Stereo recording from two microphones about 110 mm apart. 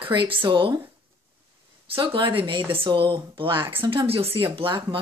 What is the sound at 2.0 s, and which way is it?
Speech, 50° right (ahead or behind).